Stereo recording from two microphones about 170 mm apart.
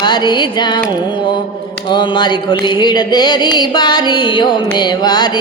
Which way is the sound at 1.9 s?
25° left (ahead or behind).